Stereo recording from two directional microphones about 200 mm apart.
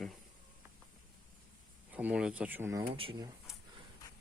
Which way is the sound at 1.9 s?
5° right (ahead or behind).